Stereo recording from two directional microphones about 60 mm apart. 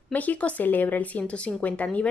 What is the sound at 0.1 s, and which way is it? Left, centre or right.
A woman's voice, left.